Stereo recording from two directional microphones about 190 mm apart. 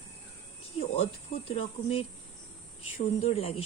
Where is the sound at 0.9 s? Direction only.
30° left (ahead or behind).